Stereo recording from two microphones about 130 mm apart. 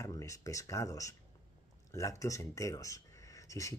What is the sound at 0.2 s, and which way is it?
Speech, 25° left (ahead or behind).